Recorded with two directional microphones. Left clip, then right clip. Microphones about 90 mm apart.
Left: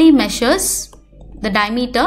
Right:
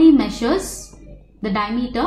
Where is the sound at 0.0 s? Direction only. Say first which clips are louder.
Left 2 dB; 20° left (ahead or behind).